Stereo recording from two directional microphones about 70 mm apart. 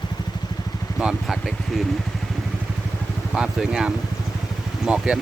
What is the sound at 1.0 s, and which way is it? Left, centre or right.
Speech, centre.